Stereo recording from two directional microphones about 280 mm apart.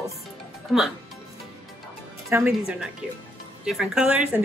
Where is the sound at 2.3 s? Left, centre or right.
Centre.